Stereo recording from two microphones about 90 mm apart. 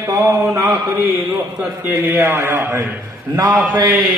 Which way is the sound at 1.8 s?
20° right (ahead or behind).